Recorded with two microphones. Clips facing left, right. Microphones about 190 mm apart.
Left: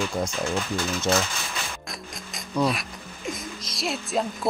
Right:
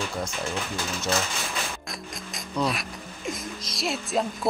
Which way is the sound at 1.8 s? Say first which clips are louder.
Right 1 dB; centre (ahead or behind).